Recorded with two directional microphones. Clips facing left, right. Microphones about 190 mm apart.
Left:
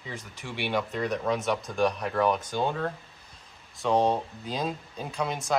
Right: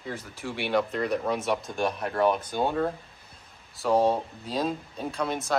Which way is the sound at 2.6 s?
10° right (ahead or behind).